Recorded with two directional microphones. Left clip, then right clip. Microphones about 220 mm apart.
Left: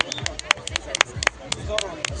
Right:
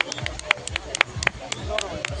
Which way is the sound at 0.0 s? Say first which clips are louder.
Left 1 dB; 30° left (ahead or behind).